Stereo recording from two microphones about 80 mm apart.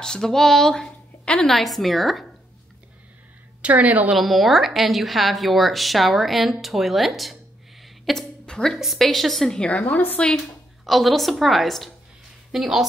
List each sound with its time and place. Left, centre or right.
0.0 s a woman's voice: centre
1.5 s a woman's voice: centre
3.6 s a woman's voice: centre
4.1 s a woman's voice: centre
8.0 s a sound: centre
8.7 s a woman's voice: centre
10.3 s a woman's voice: centre